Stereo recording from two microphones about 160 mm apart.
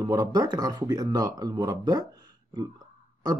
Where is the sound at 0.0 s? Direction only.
25° right (ahead or behind).